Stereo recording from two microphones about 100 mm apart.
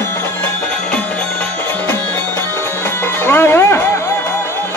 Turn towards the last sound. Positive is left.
turn(degrees=25)  # may be behind; listen again after turning